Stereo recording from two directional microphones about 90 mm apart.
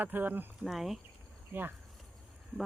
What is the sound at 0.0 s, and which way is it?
Speech, 20° right (ahead or behind).